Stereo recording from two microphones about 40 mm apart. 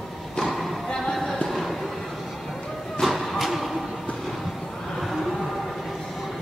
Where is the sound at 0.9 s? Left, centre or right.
Centre.